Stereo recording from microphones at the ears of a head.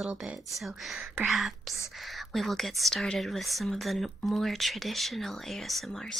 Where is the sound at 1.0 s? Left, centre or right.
Right.